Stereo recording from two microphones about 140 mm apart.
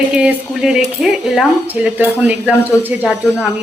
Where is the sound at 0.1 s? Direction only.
10° right (ahead or behind).